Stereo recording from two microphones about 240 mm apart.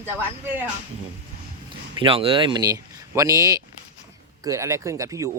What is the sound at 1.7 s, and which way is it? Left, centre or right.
Speech, right.